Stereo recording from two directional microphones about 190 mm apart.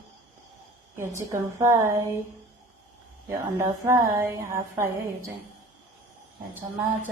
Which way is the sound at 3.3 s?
15° right (ahead or behind).